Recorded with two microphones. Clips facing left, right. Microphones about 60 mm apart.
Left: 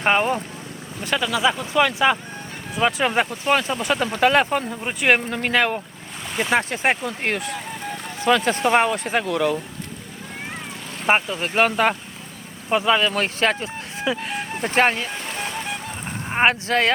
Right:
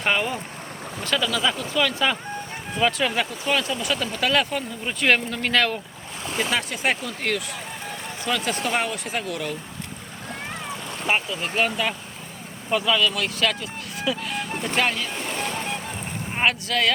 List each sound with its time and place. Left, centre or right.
0.0 s speech: left
1.7 s speech: left
3.0 s speech: left
4.8 s speech: left
6.5 s speech: left
8.3 s speech: left
11.0 s speech: left
12.7 s speech: left
16.3 s speech: left